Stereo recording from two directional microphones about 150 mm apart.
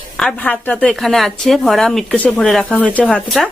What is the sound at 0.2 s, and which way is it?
A woman's voice, 5° left (ahead or behind).